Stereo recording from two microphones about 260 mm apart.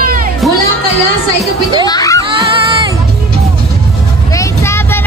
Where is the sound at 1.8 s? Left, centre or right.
Centre.